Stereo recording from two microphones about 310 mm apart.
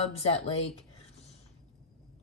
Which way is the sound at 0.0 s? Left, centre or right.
Centre.